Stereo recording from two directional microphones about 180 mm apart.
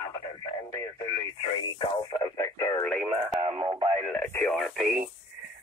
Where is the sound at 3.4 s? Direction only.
25° right (ahead or behind).